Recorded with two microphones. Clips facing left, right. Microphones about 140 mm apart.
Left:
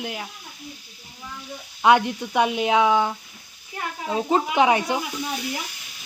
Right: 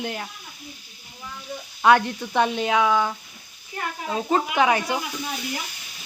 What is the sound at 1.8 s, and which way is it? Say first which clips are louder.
Speech: even; 15° left (ahead or behind).